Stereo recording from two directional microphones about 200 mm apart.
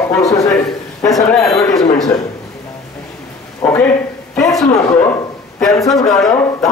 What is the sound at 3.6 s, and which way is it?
Speech, 10° left (ahead or behind).